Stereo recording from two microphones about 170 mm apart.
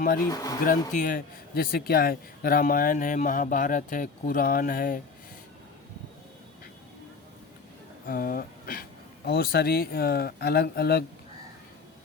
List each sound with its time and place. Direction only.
0.3 s speech: 20° left (ahead or behind)
0.6 s a man's voice: 55° left (ahead or behind)
8.0 s speech: 55° left (ahead or behind)